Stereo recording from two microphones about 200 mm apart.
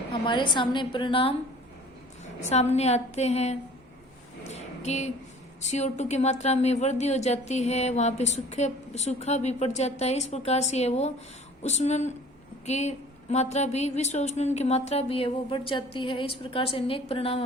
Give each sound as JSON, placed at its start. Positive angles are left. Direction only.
{"t": 0.3, "sound": "a woman's voice", "side_deg": 25}
{"t": 2.5, "sound": "speech", "side_deg": 35}
{"t": 4.4, "sound": "a sound", "side_deg": 35}
{"t": 5.6, "sound": "speech", "side_deg": 35}